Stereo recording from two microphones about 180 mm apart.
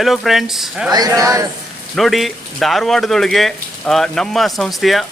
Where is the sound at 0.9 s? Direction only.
20° right (ahead or behind).